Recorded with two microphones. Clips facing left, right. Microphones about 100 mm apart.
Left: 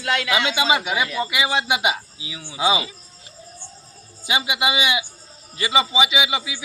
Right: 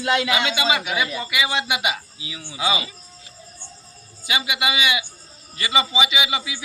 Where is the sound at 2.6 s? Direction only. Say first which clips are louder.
Left 3 dB; 25° left (ahead or behind).